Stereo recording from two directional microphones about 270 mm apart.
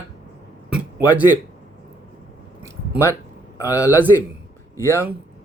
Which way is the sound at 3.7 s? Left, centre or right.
Centre.